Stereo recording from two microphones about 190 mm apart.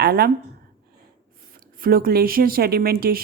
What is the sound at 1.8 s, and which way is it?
A woman's voice, 50° right (ahead or behind).